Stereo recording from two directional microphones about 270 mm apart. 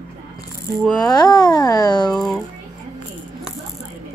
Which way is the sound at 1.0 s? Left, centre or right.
Centre.